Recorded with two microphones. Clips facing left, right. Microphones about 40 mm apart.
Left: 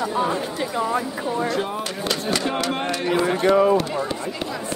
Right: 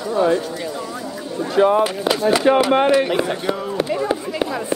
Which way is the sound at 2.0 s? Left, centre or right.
Centre.